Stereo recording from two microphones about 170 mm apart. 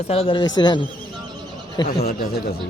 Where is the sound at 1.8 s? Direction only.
65° left (ahead or behind).